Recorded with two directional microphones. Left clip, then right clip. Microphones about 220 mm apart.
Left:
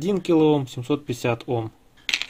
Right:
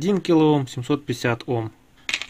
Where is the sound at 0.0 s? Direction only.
20° right (ahead or behind).